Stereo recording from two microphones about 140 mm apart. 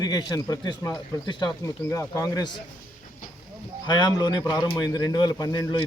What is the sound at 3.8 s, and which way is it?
A man's voice, 30° left (ahead or behind).